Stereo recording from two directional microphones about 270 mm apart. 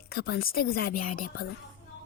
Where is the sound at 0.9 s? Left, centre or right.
Left.